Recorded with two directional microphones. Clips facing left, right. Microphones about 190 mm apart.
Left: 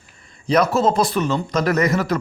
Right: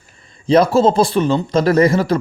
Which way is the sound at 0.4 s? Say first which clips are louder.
Right 5 dB; 30° right (ahead or behind).